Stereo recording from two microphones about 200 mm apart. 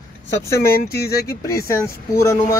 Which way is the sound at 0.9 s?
50° left (ahead or behind).